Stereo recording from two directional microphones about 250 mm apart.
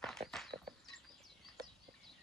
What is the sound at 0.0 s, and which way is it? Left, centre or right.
Walk, centre.